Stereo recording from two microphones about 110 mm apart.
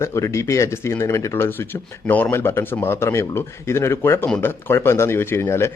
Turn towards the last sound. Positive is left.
turn(degrees=25)  # may be behind; listen again after turning